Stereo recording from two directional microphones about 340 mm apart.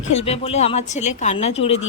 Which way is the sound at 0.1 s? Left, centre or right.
Centre.